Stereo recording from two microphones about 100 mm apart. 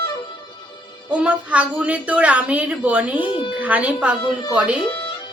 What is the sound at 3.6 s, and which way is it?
Speech, 15° right (ahead or behind).